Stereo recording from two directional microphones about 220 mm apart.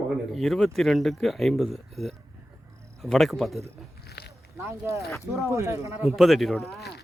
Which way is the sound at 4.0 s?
45° left (ahead or behind).